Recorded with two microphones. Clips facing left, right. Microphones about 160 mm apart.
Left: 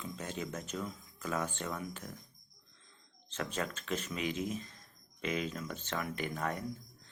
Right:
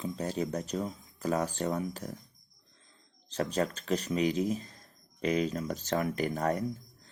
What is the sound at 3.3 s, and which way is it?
Speech, 35° right (ahead or behind).